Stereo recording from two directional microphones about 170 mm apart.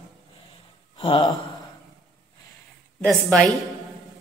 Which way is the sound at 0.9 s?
30° left (ahead or behind).